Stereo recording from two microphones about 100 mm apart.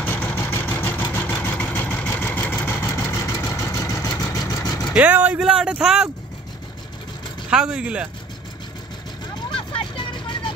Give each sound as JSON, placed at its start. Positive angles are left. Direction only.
{"t": 0.0, "sound": "vehicle", "side_deg": 20}
{"t": 4.9, "sound": "speech", "side_deg": -15}
{"t": 7.4, "sound": "speech", "side_deg": -10}
{"t": 9.6, "sound": "vehicle", "side_deg": 60}